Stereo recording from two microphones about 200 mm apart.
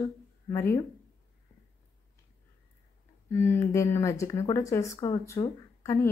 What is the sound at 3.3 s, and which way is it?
Speech, 10° left (ahead or behind).